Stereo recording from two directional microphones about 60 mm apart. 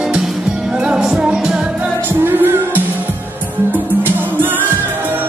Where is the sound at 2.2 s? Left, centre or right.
Right.